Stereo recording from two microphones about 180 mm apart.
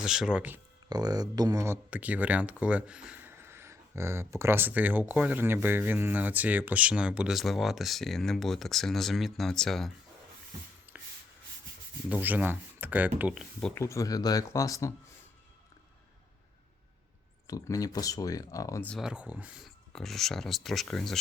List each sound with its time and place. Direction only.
0.0 s speech: 5° right (ahead or behind)
0.9 s speech: 20° right (ahead or behind); by 9.9 s centre (ahead or behind)
10.9 s rub: 10° right (ahead or behind)
12.0 s speech: 10° right (ahead or behind)
13.7 s speech: 15° left (ahead or behind)
17.4 s speech: 20° left (ahead or behind)
18.9 s speech: centre (ahead or behind)